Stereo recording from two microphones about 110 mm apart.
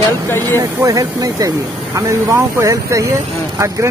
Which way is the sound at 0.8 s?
35° right (ahead or behind).